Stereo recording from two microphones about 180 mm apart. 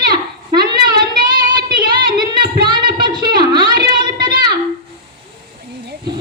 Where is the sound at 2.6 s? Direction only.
25° right (ahead or behind).